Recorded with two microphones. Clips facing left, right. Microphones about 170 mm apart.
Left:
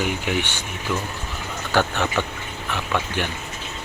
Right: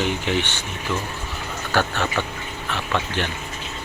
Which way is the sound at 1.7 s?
15° left (ahead or behind).